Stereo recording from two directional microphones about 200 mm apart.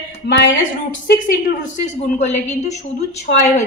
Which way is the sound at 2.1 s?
35° left (ahead or behind).